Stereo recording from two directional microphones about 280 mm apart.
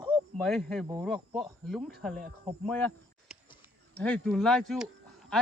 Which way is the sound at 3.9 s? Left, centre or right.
Centre.